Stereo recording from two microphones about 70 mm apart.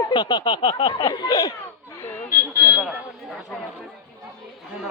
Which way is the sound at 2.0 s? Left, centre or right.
Left.